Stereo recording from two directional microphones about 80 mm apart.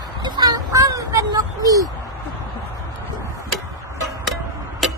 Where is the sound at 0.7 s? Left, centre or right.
Right.